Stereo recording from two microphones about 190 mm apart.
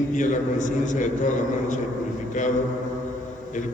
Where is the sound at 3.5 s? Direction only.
40° left (ahead or behind).